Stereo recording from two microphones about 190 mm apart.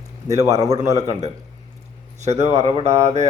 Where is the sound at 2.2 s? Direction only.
35° right (ahead or behind).